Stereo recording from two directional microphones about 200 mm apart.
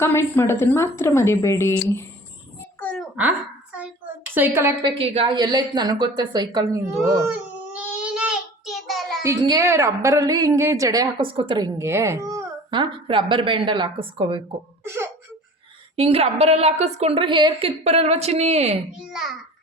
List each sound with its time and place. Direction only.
0.0 s a woman's voice: 10° left (ahead or behind)
2.8 s a sound: 5° left (ahead or behind)
4.4 s a woman's voice: 10° right (ahead or behind)
7.0 s child singing: 10° right (ahead or behind)
9.2 s a woman's voice: 15° right (ahead or behind)
14.8 s a sound: 10° right (ahead or behind)
16.0 s a woman's voice: 30° right (ahead or behind)
18.9 s a child's voice: 5° right (ahead or behind)